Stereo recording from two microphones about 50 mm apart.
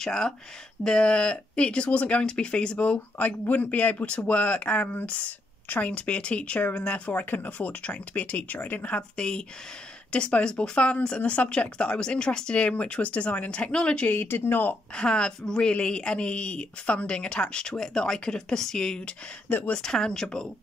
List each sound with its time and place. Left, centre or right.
0.0 s speech: centre
7.1 s speech: left
9.1 s speech: centre
14.1 s speech: left
15.0 s speech: centre